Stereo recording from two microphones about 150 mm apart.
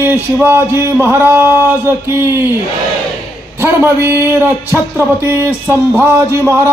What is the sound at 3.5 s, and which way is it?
Speech, 15° right (ahead or behind).